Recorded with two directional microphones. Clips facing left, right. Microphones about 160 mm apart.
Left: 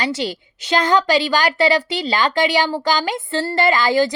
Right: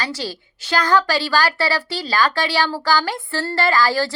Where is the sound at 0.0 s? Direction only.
20° left (ahead or behind).